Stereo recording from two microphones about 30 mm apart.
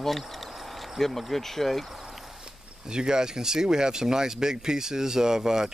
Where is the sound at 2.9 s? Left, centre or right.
Right.